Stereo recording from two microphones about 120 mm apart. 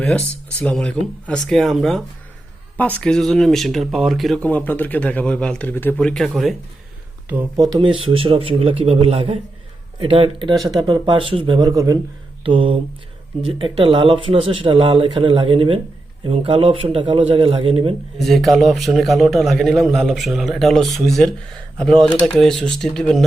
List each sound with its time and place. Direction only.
0.6 s a man's voice: 10° left (ahead or behind)
4.4 s speech: 15° left (ahead or behind)
6.0 s a man's voice: 5° left (ahead or behind)
7.5 s speech: 35° right (ahead or behind)
10.6 s speech: 35° right (ahead or behind)
11.7 s speech: 30° right (ahead or behind)
12.4 s speech: 45° right (ahead or behind)
18.2 s a man's voice: centre (ahead or behind)